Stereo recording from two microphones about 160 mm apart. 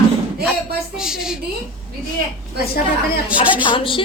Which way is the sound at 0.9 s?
5° right (ahead or behind).